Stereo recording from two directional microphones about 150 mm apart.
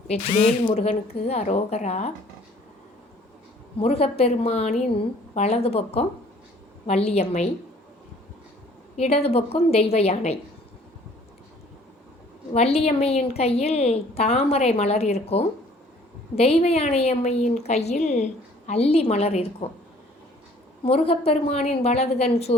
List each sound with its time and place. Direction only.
0.1 s a woman's voice: 45° left (ahead or behind)
3.8 s a woman's voice: 40° left (ahead or behind)
9.0 s a woman's voice: 40° left (ahead or behind)
12.5 s a woman's voice: 45° left (ahead or behind)
20.8 s a woman's voice: 40° left (ahead or behind)